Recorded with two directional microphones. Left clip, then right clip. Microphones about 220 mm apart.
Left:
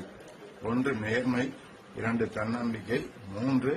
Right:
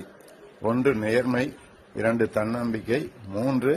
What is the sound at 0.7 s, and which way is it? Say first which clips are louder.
Speech: right 7 dB; 35° right (ahead or behind).